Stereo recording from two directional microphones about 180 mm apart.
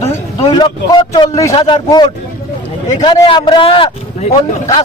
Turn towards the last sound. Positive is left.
turn(degrees=30)  # may be behind; listen again after turning